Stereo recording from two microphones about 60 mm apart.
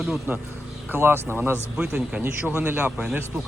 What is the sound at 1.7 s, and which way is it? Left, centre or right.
Speech, centre.